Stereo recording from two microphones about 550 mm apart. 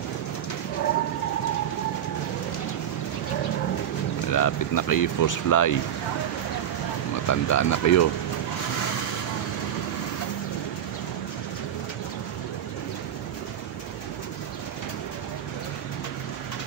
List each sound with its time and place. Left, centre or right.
4.3 s speech: left
7.2 s speech: left